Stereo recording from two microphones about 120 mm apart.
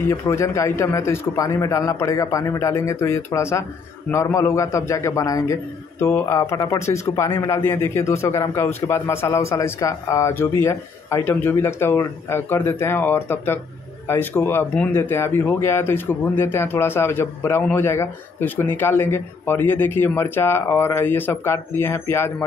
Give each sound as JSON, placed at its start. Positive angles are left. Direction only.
{"t": 0.1, "sound": "a man's voice", "side_deg": 25}